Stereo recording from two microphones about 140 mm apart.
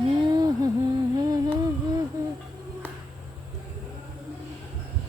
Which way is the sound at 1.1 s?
30° right (ahead or behind).